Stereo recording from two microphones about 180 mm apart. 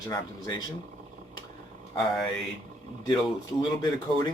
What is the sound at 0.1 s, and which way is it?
Speech, 20° left (ahead or behind).